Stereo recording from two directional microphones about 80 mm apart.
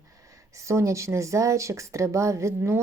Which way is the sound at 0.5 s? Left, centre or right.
Right.